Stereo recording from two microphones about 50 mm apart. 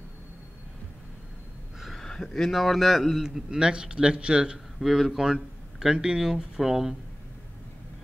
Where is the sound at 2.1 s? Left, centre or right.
Centre.